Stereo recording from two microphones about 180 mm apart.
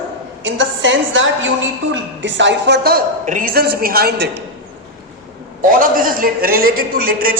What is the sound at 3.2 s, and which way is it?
A man's voice, 45° right (ahead or behind).